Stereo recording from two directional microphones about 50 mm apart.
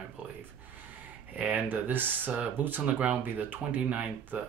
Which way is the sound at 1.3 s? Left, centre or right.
Right.